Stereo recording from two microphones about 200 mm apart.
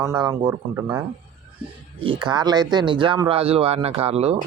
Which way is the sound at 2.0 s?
25° right (ahead or behind).